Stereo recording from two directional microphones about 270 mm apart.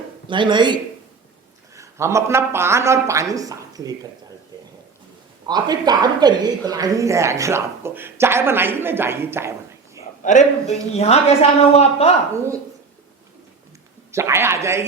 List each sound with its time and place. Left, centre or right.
0.3 s speech: centre
5.5 s speech: centre
10.2 s speech: left
14.1 s speech: centre